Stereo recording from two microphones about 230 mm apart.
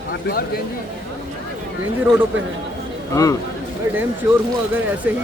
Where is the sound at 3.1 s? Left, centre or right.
Centre.